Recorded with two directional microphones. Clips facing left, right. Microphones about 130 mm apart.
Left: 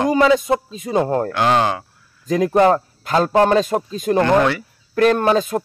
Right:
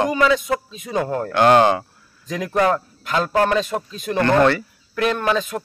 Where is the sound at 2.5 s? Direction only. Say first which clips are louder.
Left 3 dB; 25° left (ahead or behind).